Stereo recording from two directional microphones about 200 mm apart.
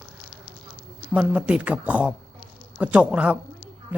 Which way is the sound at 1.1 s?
5° right (ahead or behind).